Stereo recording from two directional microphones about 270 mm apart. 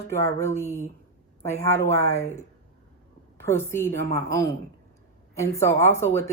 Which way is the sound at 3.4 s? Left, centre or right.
Centre.